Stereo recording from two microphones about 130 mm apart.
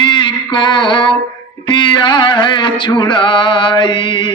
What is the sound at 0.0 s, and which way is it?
Mantra, 40° left (ahead or behind).